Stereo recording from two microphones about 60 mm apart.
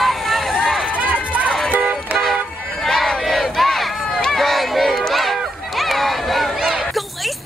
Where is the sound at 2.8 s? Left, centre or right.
Centre.